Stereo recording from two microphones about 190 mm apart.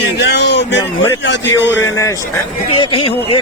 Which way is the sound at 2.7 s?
30° left (ahead or behind).